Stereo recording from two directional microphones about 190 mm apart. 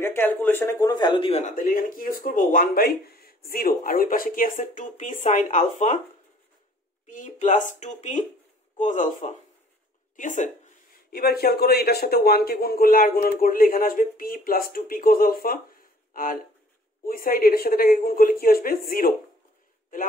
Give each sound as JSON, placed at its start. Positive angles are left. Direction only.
{"t": 0.0, "sound": "speech", "side_deg": 10}
{"t": 1.6, "sound": "speech", "side_deg": 45}
{"t": 7.1, "sound": "speech", "side_deg": 40}
{"t": 11.1, "sound": "speech", "side_deg": 55}